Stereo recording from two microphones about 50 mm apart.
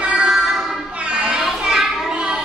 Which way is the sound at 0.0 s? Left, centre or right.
Centre.